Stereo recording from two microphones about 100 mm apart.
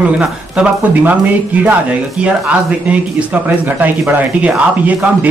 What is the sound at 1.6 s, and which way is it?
Speech, 15° right (ahead or behind).